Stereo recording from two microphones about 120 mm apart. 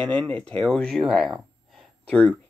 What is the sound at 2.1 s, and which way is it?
Speech, 10° left (ahead or behind).